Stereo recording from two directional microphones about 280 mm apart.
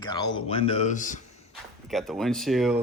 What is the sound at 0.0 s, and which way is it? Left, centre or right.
A man's voice, centre.